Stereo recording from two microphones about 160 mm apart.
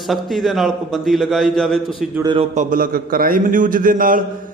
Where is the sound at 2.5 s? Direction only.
60° right (ahead or behind).